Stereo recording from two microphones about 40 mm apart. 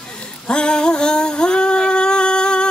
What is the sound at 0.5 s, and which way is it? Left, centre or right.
Singing, left.